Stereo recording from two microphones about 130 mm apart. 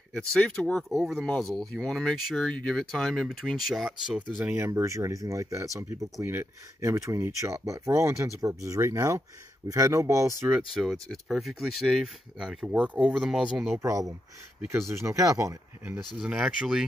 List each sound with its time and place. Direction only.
0.1 s speech: 5° left (ahead or behind)
4.6 s speech: 20° right (ahead or behind)
10.7 s speech: centre (ahead or behind)
13.8 s speech: 25° right (ahead or behind)
16.2 s speech: 5° right (ahead or behind)